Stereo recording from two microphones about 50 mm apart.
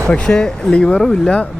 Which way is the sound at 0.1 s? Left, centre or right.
Centre.